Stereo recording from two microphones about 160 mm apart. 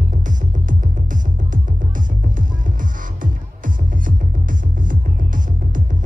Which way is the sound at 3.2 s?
55° right (ahead or behind).